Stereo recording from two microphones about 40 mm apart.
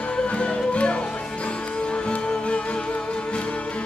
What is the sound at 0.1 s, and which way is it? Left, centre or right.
Music, left.